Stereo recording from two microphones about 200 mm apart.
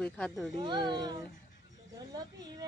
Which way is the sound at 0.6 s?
20° right (ahead or behind).